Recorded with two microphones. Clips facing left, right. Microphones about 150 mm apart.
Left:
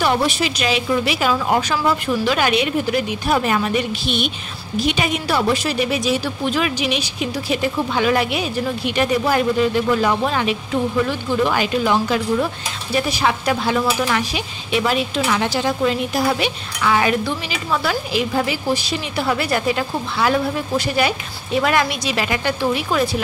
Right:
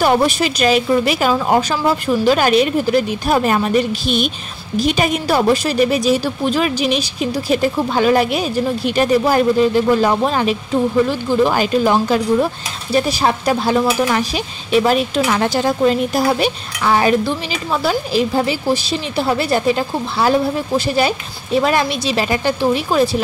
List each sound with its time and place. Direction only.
0.0 s a woman's voice: 45° right (ahead or behind)